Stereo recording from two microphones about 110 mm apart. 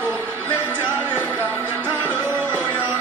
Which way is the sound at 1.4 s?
20° right (ahead or behind).